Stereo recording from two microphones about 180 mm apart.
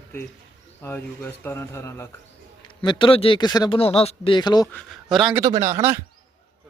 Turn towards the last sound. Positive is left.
turn(degrees=-15)  # may be behind; listen again after turning